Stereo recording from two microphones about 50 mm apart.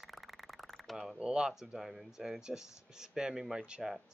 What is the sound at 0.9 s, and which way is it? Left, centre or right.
Speech, centre.